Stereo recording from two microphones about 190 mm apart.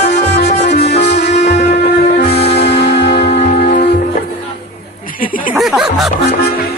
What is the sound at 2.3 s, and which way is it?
Music, 60° left (ahead or behind).